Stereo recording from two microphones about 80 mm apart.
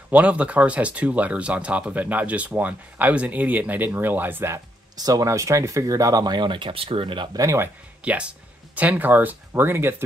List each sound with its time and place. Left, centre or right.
0.1 s speech: centre
4.9 s speech: right
7.3 s speech: right
8.0 s speech: centre